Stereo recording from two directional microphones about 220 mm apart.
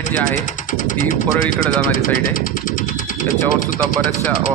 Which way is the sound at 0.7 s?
35° left (ahead or behind).